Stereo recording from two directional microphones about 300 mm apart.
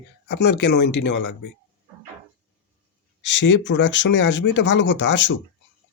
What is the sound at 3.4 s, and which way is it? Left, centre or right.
Speech, left.